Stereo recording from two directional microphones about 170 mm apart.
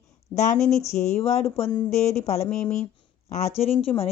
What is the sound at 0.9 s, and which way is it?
Speech, 40° left (ahead or behind).